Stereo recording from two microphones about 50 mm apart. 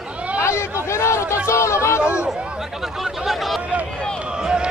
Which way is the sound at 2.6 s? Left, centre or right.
Centre.